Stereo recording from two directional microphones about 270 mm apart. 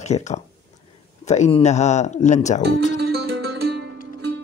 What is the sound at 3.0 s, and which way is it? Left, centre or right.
Music, right.